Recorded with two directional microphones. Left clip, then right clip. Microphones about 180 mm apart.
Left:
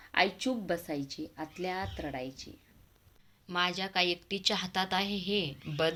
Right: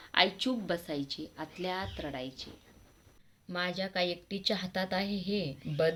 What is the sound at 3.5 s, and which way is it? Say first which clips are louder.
A woman's voice: left 3 dB; 15° left (ahead or behind).